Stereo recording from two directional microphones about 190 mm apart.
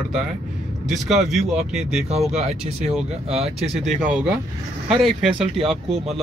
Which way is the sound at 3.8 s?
5° right (ahead or behind).